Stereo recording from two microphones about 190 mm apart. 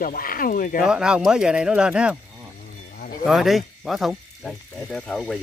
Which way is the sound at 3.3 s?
Centre (ahead or behind).